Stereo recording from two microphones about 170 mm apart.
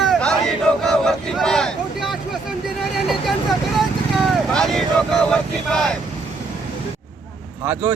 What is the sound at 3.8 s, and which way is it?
Vehicle, centre (ahead or behind).